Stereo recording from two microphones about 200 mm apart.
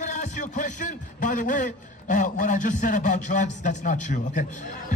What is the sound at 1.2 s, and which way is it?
A man's voice, 40° left (ahead or behind).